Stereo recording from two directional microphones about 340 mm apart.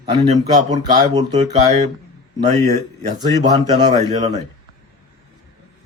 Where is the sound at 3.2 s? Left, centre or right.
Centre.